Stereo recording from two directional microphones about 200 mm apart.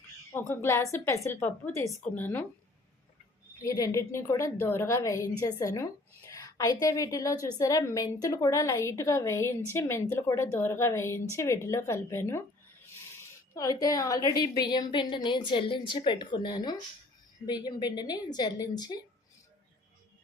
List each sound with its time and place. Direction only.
0.3 s a woman's voice: 10° left (ahead or behind)
3.6 s a woman's voice: 15° left (ahead or behind)